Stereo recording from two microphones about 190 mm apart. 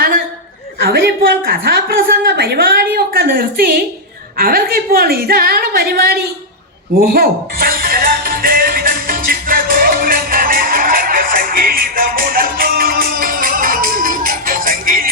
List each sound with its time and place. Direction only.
1.4 s a woman's voice: 50° right (ahead or behind)
7.1 s music: 50° right (ahead or behind)